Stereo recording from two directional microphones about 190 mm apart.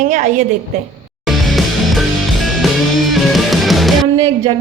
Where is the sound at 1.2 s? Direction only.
Centre (ahead or behind).